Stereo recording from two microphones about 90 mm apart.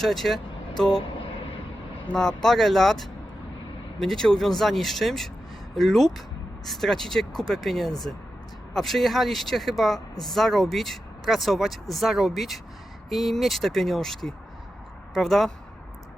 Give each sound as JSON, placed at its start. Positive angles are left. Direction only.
{"t": 0.0, "sound": "speech", "side_deg": 0}
{"t": 1.0, "sound": "vehicle", "side_deg": 80}
{"t": 2.1, "sound": "speech", "side_deg": 5}